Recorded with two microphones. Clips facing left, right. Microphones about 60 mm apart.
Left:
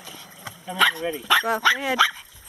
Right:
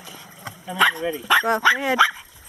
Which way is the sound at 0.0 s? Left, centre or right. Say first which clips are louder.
Right 1 dB; centre.